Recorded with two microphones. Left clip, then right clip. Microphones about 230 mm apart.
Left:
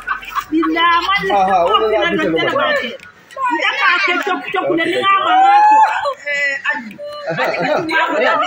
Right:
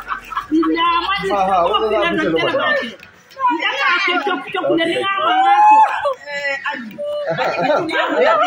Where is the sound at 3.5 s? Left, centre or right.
Centre.